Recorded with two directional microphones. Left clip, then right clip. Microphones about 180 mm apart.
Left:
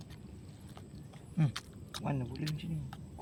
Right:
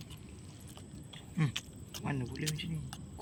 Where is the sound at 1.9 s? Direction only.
35° left (ahead or behind).